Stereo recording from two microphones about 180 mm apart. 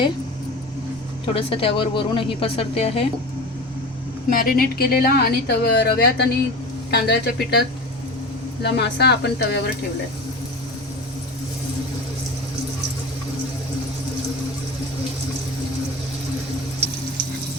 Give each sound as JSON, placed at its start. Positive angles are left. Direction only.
{"t": 1.3, "sound": "a woman's voice", "side_deg": 30}
{"t": 4.3, "sound": "a woman's voice", "side_deg": 55}
{"t": 8.6, "sound": "speech", "side_deg": 70}